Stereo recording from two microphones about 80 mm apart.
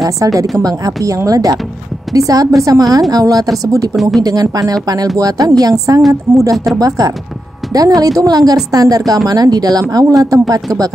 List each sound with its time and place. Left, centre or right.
0.0 s a woman's voice: right
3.9 s speech: centre
4.2 s a woman's voice: right
6.5 s speech: centre
6.8 s a woman's voice: right